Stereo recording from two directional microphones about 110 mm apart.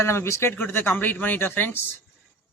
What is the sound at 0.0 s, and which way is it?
Speech, 25° left (ahead or behind).